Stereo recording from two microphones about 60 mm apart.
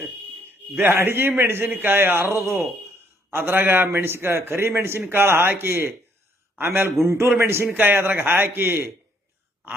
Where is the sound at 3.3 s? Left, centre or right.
Right.